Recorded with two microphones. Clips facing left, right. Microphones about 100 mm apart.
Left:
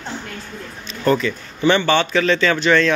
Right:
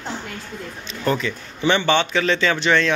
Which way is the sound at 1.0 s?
15° right (ahead or behind).